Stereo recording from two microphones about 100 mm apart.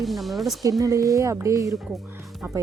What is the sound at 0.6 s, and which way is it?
A woman's voice, 35° right (ahead or behind).